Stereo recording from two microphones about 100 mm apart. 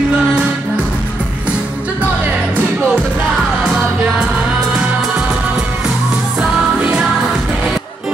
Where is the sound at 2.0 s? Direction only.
10° right (ahead or behind).